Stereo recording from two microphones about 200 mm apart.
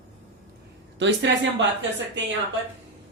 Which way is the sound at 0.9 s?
65° right (ahead or behind).